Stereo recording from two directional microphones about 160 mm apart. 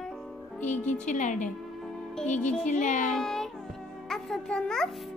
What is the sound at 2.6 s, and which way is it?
Speech, 50° left (ahead or behind).